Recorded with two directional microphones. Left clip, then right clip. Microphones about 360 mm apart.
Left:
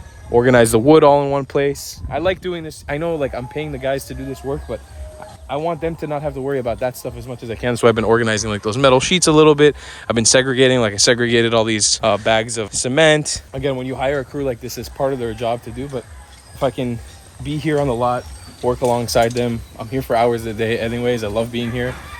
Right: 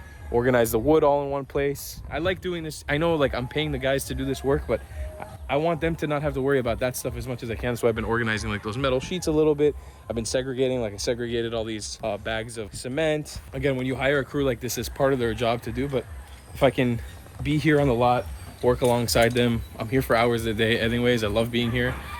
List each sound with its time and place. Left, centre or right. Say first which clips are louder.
0.3 s speech: left 9 dB; left
7.6 s speech: left 10 dB; left
7.9 s speech: left 10 dB; centre